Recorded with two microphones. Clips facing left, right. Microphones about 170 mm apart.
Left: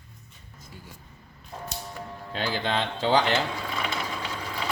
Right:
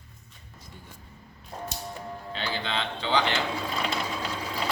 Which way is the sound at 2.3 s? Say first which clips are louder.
Left 4 dB; 45° left (ahead or behind).